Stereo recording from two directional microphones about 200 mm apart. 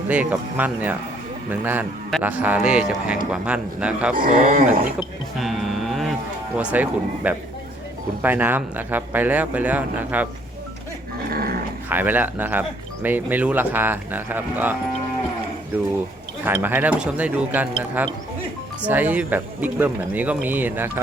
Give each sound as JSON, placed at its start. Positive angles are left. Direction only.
{"t": 0.1, "sound": "speech", "side_deg": -10}
{"t": 4.1, "sound": "speech", "side_deg": -45}
{"t": 4.9, "sound": "a sound", "side_deg": 0}
{"t": 6.6, "sound": "speech", "side_deg": -5}
{"t": 11.3, "sound": "dog", "side_deg": -50}
{"t": 11.9, "sound": "speech", "side_deg": -10}
{"t": 16.4, "sound": "speech", "side_deg": -10}